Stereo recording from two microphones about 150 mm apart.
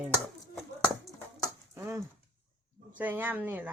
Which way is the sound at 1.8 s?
15° right (ahead or behind).